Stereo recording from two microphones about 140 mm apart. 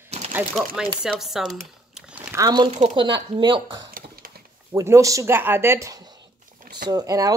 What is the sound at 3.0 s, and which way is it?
Speech, 35° right (ahead or behind).